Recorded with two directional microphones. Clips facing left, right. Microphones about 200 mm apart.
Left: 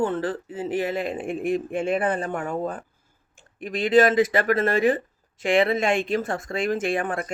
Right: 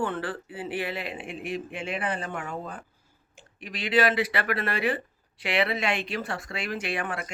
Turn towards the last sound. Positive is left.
turn(degrees=45)  # may be behind; listen again after turning